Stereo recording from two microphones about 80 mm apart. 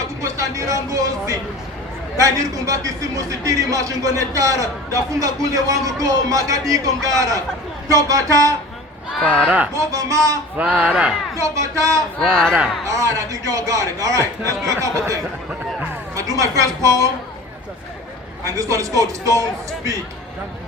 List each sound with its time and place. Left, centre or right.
0.2 s a man's voice: right
9.2 s speech: centre
9.7 s a man's voice: right
10.6 s speech: centre
11.3 s speech: right
12.2 s speech: centre
12.8 s a man's voice: right
18.4 s a man's voice: right